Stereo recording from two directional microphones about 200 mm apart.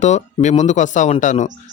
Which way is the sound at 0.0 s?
35° left (ahead or behind).